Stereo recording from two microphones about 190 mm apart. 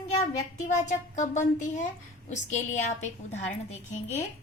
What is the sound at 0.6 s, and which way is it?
A woman's voice, 40° left (ahead or behind).